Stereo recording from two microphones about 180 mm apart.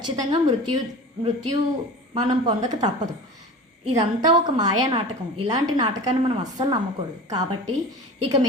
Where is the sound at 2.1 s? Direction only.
25° right (ahead or behind).